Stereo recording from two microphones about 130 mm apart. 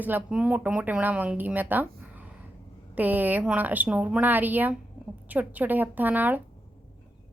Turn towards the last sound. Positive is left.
turn(degrees=-15)  # may be behind; listen again after turning